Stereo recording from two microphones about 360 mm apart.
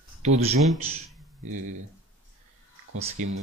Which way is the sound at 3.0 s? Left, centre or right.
Centre.